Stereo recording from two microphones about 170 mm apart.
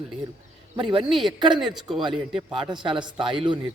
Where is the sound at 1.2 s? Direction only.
25° right (ahead or behind).